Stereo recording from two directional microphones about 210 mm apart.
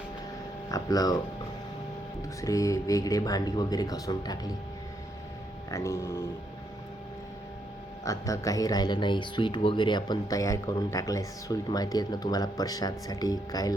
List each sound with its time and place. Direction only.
0.7 s speech: 15° left (ahead or behind)
2.4 s speech: 15° left (ahead or behind)
5.7 s speech: 15° left (ahead or behind)
8.0 s speech: 15° left (ahead or behind)